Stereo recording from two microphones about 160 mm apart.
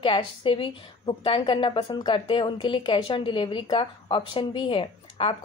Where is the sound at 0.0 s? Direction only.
35° left (ahead or behind).